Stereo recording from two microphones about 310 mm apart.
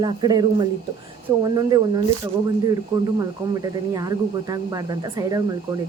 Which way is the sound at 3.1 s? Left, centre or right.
Centre.